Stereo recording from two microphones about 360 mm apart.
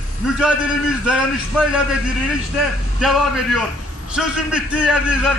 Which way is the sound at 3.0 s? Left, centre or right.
Centre.